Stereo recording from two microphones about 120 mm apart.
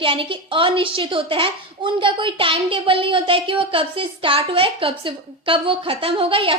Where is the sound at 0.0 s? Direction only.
45° right (ahead or behind).